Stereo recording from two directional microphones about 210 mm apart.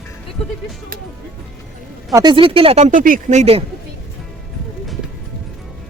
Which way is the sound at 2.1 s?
20° right (ahead or behind).